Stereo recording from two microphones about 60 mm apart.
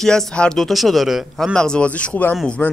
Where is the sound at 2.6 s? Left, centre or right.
Left.